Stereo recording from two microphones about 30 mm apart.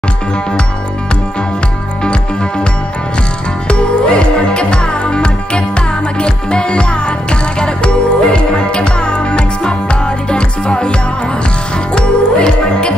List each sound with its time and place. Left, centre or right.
3.6 s music: left